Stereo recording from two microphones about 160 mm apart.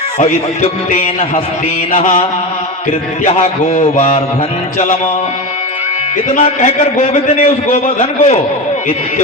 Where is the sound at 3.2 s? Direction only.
45° left (ahead or behind).